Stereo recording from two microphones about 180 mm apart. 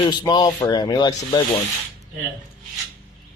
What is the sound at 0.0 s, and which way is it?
Speech, 25° left (ahead or behind).